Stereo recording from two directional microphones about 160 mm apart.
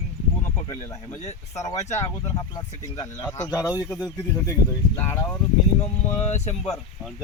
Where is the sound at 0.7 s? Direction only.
15° left (ahead or behind).